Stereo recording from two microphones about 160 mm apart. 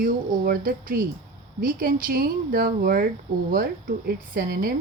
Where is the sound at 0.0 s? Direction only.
65° right (ahead or behind).